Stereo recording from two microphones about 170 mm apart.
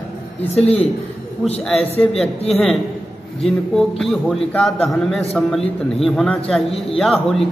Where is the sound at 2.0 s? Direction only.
Centre (ahead or behind).